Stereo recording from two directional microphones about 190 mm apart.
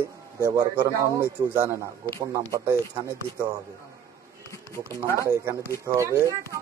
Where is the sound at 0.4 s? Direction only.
20° right (ahead or behind).